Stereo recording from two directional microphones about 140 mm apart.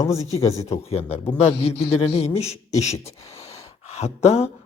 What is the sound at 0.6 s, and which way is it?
Speech, 45° left (ahead or behind).